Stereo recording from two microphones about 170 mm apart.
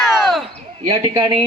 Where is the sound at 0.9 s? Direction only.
25° right (ahead or behind).